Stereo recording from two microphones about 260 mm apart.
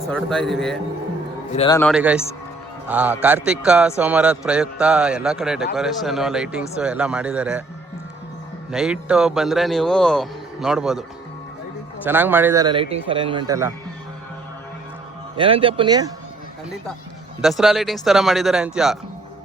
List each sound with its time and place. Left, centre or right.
0.1 s a man's voice: centre
1.5 s a man's voice: centre
1.8 s a man's voice: centre
8.7 s a man's voice: centre
12.0 s speech: centre
15.4 s speech: right
17.4 s a man's voice: centre